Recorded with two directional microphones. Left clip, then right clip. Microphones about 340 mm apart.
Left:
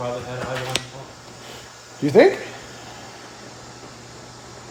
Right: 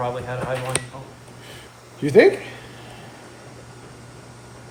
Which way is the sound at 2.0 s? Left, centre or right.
Centre.